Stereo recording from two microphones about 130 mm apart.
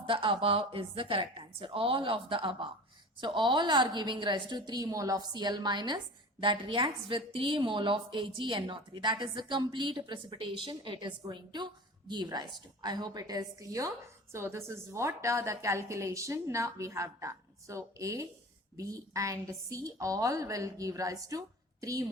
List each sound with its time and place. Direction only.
0.0 s a woman's voice: 40° right (ahead or behind)